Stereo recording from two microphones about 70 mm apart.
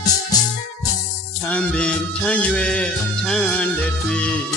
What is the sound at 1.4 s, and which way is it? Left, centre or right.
Music, centre.